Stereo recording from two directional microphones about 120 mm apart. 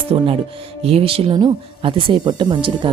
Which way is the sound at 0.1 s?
45° right (ahead or behind).